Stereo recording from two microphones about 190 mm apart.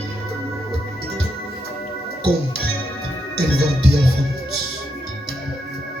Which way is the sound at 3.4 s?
60° right (ahead or behind).